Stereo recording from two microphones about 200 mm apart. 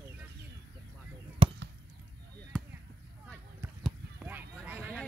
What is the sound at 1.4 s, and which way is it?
Basketball bounce, 30° right (ahead or behind).